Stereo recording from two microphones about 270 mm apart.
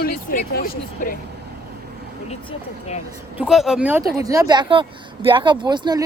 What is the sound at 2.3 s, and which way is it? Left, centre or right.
Speech, left.